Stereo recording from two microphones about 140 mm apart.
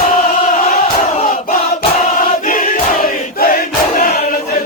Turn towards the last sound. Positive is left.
turn(degrees=85)